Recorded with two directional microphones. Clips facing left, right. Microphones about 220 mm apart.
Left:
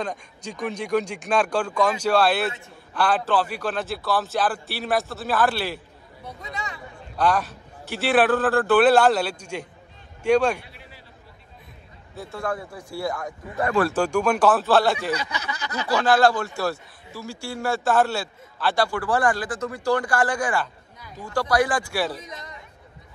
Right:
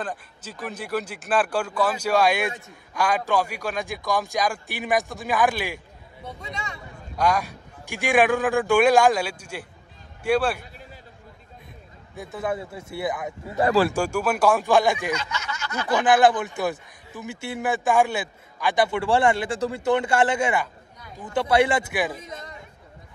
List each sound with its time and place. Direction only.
0.0 s a man's voice: 5° right (ahead or behind)
7.2 s a man's voice: 10° right (ahead or behind)
12.2 s a man's voice: 20° right (ahead or behind)
13.9 s a man's voice: 10° right (ahead or behind)